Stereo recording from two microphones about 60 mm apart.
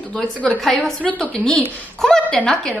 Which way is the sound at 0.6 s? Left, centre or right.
Centre.